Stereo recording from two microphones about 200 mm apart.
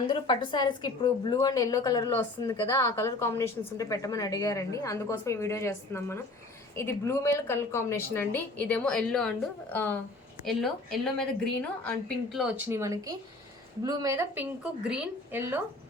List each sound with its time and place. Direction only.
0.1 s a woman's voice: 25° left (ahead or behind); by 15.6 s 10° right (ahead or behind)